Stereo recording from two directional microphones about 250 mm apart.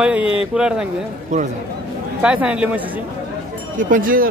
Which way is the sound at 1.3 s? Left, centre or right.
Right.